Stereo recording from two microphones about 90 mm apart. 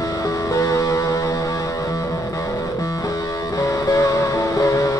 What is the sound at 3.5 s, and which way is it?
Music, 40° left (ahead or behind).